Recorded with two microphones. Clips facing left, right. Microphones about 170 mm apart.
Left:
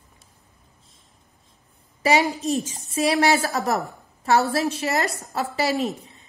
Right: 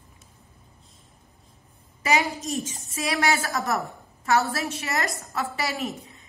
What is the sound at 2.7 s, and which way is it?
A woman's voice, 35° left (ahead or behind).